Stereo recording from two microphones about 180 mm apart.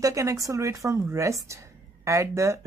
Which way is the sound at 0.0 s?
15° right (ahead or behind).